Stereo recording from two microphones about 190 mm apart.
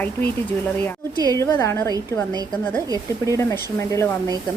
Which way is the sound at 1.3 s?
15° left (ahead or behind).